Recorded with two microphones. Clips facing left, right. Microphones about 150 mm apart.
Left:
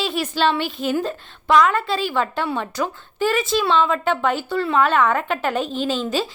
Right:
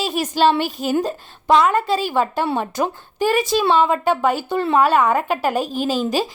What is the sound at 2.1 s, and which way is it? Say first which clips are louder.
Speech: right 3 dB; 15° right (ahead or behind).